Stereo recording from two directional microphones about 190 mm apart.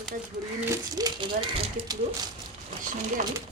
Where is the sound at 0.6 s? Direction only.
20° right (ahead or behind).